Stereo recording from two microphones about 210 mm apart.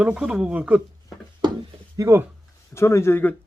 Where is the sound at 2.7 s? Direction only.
10° left (ahead or behind).